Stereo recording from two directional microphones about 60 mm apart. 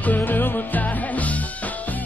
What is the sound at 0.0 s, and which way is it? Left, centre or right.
Music, left.